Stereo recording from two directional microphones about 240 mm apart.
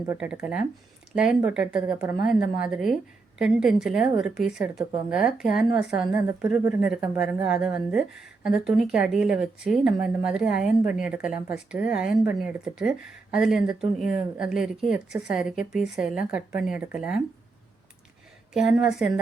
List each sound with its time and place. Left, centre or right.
0.1 s a woman's voice: centre
18.5 s a woman's voice: centre